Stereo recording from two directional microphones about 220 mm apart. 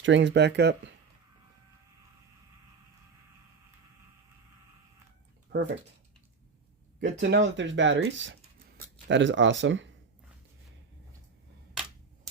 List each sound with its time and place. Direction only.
0.0 s speech: 55° right (ahead or behind)
5.5 s speech: 50° right (ahead or behind)
7.0 s speech: 55° right (ahead or behind)
11.7 s a sound: centre (ahead or behind)